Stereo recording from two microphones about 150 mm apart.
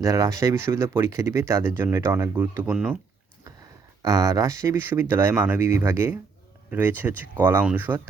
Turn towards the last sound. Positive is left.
turn(degrees=-10)  # may be behind; listen again after turning